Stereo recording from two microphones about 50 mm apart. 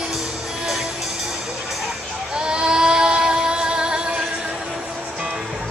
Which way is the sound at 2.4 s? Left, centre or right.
Centre.